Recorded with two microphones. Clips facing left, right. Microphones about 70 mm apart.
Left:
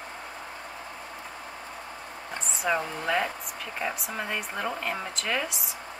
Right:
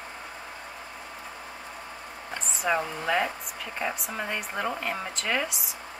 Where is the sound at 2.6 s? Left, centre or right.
Centre.